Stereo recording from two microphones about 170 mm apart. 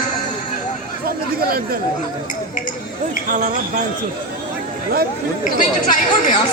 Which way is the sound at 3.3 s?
45° right (ahead or behind).